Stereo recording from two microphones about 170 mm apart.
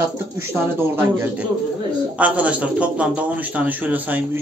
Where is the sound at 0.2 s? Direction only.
15° right (ahead or behind).